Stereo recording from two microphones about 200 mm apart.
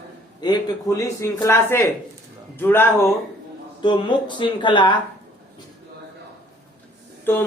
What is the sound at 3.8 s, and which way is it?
Speech, 25° left (ahead or behind).